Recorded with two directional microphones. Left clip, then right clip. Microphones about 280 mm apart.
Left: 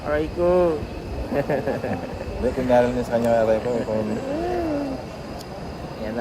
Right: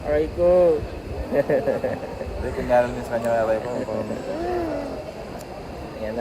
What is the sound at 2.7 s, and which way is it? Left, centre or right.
Speech, left.